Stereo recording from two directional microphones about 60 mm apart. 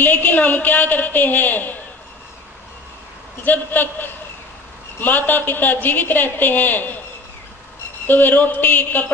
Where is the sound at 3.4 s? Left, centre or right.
Left.